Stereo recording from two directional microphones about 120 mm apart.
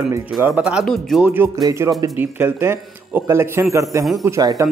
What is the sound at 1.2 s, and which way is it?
Speech, 15° right (ahead or behind).